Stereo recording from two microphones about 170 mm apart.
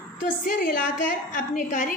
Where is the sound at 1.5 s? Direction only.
45° left (ahead or behind).